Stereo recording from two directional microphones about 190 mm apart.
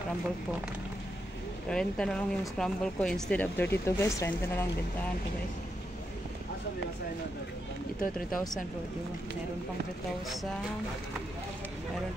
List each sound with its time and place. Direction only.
1.7 s speech: 5° left (ahead or behind)
8.0 s speech: 45° left (ahead or behind)